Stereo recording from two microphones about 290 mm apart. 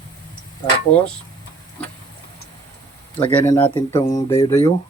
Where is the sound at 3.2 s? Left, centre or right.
Centre.